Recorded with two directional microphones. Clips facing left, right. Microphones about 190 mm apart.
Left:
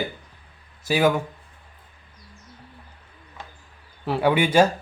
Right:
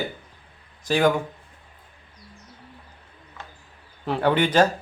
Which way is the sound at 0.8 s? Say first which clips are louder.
Even; 10° left (ahead or behind).